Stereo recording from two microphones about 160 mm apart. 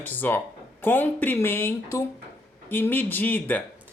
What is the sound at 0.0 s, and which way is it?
Speech, 10° left (ahead or behind).